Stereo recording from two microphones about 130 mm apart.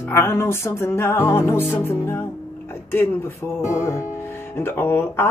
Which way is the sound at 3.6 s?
20° left (ahead or behind).